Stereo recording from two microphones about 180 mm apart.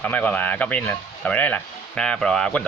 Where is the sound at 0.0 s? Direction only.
10° left (ahead or behind).